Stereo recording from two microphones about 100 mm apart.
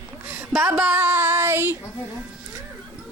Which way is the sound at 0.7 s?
15° right (ahead or behind).